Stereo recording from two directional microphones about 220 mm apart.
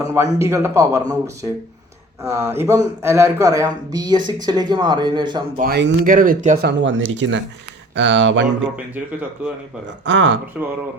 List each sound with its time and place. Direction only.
0.1 s speech: 10° right (ahead or behind)
5.5 s speech: 45° right (ahead or behind)
6.7 s speech: 55° right (ahead or behind)
10.1 s speech: 55° right (ahead or behind)
10.5 s speech: 5° right (ahead or behind)